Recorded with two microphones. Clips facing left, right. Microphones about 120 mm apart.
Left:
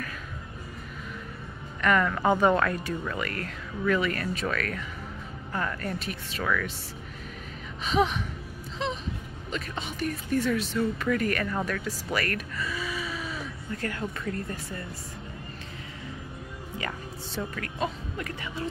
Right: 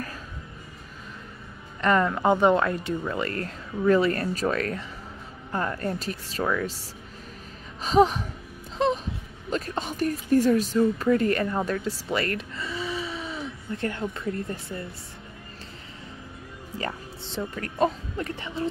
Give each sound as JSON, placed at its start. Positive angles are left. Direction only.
{"t": 1.8, "sound": "speech", "side_deg": -30}
{"t": 7.8, "sound": "speech", "side_deg": -40}
{"t": 8.7, "sound": "wail", "side_deg": -45}
{"t": 9.5, "sound": "speech", "side_deg": -40}
{"t": 17.4, "sound": "speech", "side_deg": -5}
{"t": 18.1, "sound": "speech", "side_deg": -30}